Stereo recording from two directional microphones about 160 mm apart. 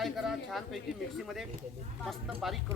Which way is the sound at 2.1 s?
Centre (ahead or behind).